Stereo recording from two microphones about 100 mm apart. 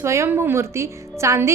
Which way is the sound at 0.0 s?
30° right (ahead or behind).